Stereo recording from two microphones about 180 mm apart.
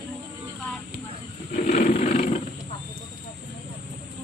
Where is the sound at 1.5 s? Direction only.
40° left (ahead or behind).